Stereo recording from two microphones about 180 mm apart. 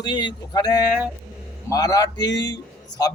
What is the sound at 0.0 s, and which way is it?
A man's voice, 25° left (ahead or behind).